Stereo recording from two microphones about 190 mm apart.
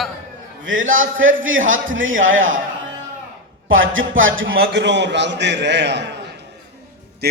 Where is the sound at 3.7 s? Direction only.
90° right.